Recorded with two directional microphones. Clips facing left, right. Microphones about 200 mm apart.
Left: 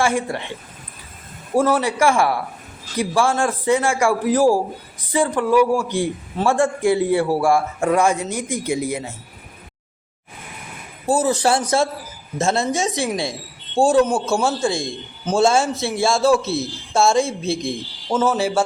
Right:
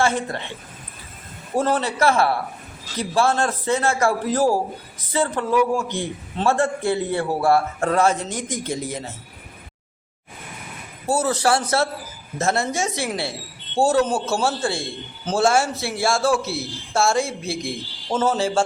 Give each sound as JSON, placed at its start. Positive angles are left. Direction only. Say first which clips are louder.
{"t": 0.0, "sound": "a man's voice", "louder": "left 2 dB", "side_deg": 10}
{"t": 1.5, "sound": "a man's voice", "louder": "left 3 dB", "side_deg": 10}
{"t": 11.0, "sound": "a man's voice", "louder": "left 3 dB", "side_deg": 15}
{"t": 13.8, "sound": "a man's voice", "louder": "left 3 dB", "side_deg": -5}
{"t": 14.3, "sound": "a man's voice", "louder": "left 4 dB", "side_deg": 15}